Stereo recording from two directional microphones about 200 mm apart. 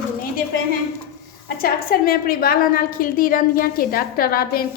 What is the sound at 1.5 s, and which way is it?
A woman's voice, 50° left (ahead or behind).